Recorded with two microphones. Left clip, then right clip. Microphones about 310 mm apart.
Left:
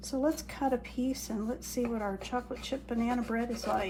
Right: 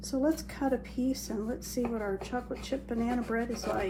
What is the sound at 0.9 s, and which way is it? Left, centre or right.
Speech, left.